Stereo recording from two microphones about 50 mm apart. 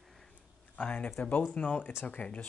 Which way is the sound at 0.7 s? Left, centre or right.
Left.